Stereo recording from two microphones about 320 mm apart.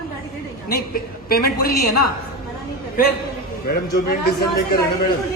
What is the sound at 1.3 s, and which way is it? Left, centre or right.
Speech, left.